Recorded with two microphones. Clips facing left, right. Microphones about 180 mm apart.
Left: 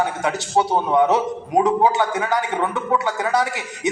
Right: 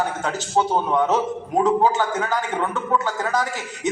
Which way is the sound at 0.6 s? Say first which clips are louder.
Left 2 dB; 15° left (ahead or behind).